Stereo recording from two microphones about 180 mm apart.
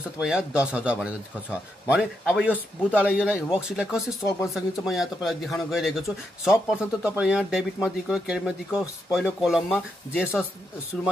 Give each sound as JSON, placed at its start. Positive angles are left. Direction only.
{"t": 0.2, "sound": "speech", "side_deg": -5}
{"t": 4.2, "sound": "speech", "side_deg": 15}
{"t": 4.6, "sound": "speech", "side_deg": 0}